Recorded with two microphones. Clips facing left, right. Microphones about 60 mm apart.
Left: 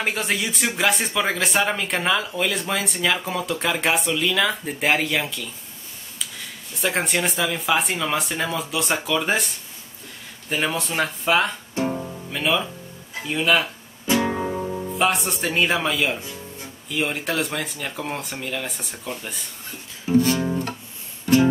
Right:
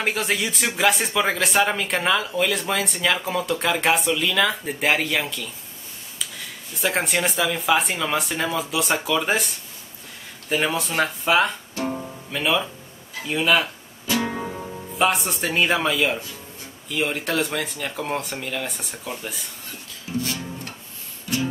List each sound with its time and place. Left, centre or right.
0.0 s speech: centre
11.9 s music: centre
13.2 s speech: centre
14.2 s music: centre
15.0 s speech: centre
20.1 s guitar: left